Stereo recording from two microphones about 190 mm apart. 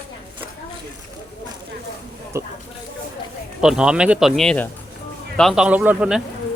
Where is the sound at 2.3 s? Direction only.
15° right (ahead or behind).